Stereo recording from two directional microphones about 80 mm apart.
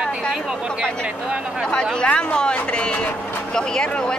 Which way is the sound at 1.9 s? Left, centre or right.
Centre.